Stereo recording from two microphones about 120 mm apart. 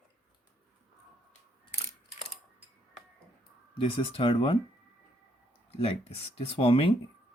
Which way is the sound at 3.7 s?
50° left (ahead or behind).